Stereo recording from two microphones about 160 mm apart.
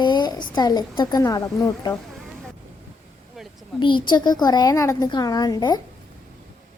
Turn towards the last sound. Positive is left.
turn(degrees=25)  # may be behind; listen again after turning